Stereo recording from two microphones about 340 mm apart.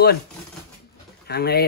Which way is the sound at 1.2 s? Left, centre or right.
Left.